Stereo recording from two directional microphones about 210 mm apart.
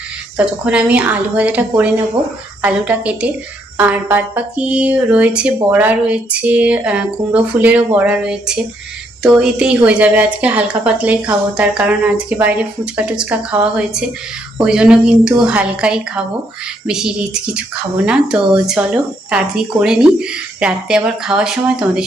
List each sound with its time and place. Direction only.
0.3 s a woman's voice: 5° right (ahead or behind)